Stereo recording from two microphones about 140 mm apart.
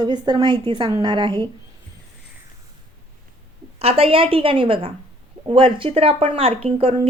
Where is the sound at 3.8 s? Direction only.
45° right (ahead or behind).